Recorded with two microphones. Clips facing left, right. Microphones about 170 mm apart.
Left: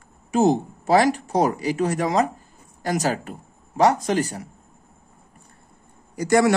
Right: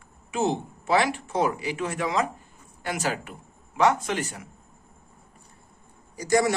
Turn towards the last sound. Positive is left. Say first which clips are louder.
# left 5 dB
turn(degrees=65)  # may be behind; listen again after turning